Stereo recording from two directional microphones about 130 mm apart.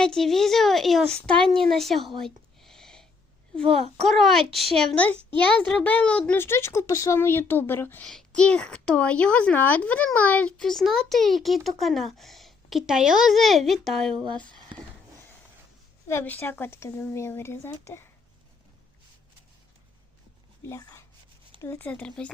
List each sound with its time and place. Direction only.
0.0 s speech: 5° left (ahead or behind)
1.7 s a sound: centre (ahead or behind)
4.0 s speech: centre (ahead or behind)
5.1 s a child's voice: 40° right (ahead or behind)
5.5 s speech: 10° left (ahead or behind)
8.0 s speech: 5° left (ahead or behind)
16.0 s speech: 15° left (ahead or behind)
20.7 s speech: 25° left (ahead or behind)